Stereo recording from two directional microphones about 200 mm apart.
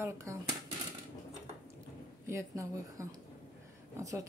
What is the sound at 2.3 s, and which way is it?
Speech, 15° right (ahead or behind).